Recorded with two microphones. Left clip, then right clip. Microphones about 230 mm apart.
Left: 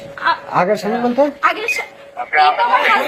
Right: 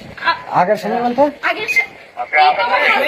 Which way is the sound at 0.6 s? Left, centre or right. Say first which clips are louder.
Right 2 dB; left.